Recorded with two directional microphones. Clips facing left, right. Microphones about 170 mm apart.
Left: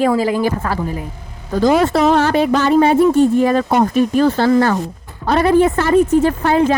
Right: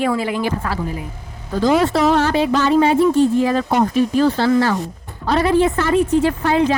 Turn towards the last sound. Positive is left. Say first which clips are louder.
# left 2 dB
turn(degrees=45)  # may be behind; listen again after turning